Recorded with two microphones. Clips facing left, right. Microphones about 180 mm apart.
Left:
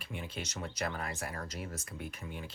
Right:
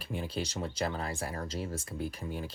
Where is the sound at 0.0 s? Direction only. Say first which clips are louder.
Right 6 dB; 35° right (ahead or behind).